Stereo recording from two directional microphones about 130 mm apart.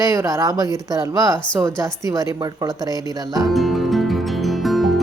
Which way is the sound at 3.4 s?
Centre (ahead or behind).